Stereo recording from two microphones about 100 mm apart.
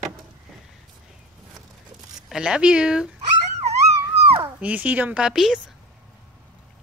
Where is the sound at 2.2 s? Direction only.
5° right (ahead or behind).